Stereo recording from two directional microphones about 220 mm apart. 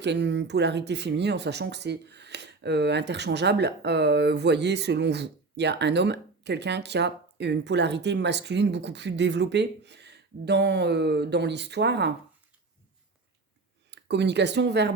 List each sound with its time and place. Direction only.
0.0 s speech: 50° right (ahead or behind)
13.9 s speech: 50° right (ahead or behind)